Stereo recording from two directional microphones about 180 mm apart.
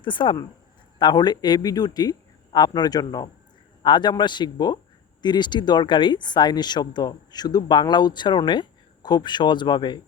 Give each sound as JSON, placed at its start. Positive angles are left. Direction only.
{"t": 0.0, "sound": "speech", "side_deg": 25}